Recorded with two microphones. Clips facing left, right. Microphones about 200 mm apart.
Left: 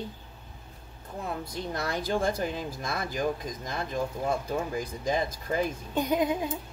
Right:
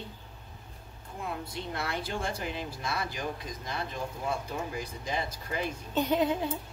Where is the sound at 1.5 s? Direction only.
40° left (ahead or behind).